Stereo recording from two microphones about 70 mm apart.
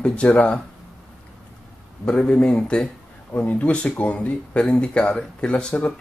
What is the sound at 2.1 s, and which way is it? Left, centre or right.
Speech, centre.